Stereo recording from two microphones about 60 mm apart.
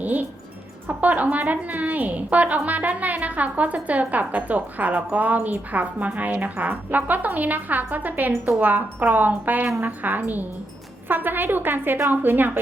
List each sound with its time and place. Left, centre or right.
0.0 s a woman's voice: right